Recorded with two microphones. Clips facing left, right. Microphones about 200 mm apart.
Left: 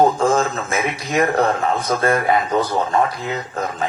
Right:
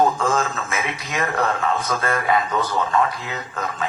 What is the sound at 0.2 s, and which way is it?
A man's voice, 35° left (ahead or behind).